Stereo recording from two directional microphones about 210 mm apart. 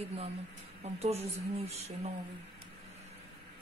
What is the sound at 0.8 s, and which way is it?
Speech, 30° right (ahead or behind).